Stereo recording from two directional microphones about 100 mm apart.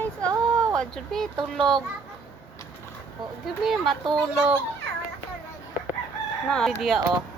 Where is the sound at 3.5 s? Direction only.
Centre (ahead or behind).